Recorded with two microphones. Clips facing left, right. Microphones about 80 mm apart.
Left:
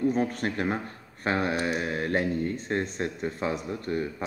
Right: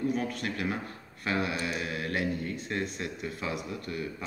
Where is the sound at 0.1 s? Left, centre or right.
Left.